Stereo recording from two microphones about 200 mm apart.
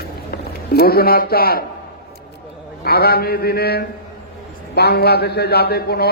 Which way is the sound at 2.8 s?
50° left (ahead or behind).